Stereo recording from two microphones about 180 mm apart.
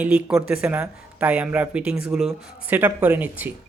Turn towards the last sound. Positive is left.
turn(degrees=-10)  # may be behind; listen again after turning